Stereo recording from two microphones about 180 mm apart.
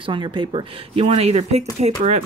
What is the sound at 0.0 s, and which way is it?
A woman's voice, 25° right (ahead or behind).